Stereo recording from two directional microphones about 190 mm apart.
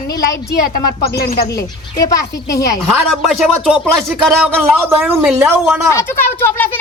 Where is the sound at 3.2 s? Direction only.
Centre (ahead or behind).